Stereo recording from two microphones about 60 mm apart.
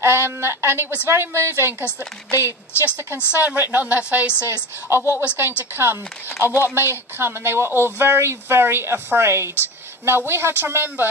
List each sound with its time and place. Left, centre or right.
0.0 s speech: right
2.3 s a woman's voice: left
3.3 s a woman's voice: right
4.8 s a woman's voice: right
6.4 s speech: right